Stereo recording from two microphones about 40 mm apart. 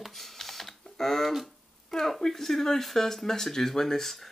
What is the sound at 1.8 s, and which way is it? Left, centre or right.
Speech, centre.